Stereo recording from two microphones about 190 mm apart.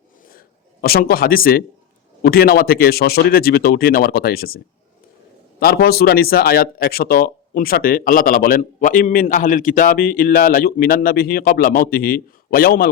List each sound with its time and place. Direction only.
0.3 s a man's voice: 55° left (ahead or behind)